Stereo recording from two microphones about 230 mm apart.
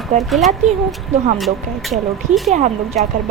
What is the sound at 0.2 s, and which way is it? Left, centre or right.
Speech, centre.